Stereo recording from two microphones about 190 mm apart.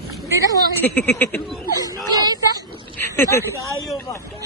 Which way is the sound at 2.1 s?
20° right (ahead or behind).